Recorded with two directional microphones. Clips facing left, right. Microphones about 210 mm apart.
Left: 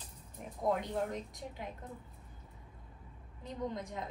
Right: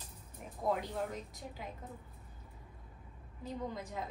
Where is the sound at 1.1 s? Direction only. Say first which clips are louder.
Left 3 dB; centre (ahead or behind).